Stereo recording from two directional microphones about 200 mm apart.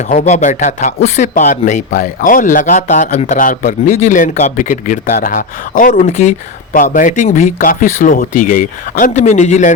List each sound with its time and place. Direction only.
0.1 s speech: 35° left (ahead or behind)